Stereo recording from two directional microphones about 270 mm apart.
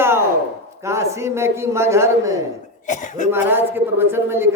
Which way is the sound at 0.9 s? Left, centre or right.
Centre.